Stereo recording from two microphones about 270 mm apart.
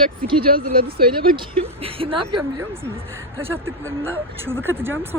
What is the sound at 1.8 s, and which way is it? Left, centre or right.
Speech, centre.